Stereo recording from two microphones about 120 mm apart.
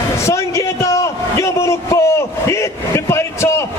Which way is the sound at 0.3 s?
25° left (ahead or behind).